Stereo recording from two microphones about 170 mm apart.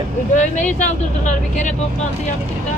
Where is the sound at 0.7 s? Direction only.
45° left (ahead or behind).